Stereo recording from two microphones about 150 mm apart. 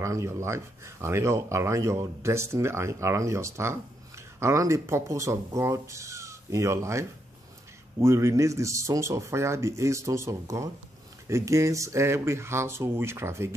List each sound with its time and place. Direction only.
0.0 s speech: 20° right (ahead or behind)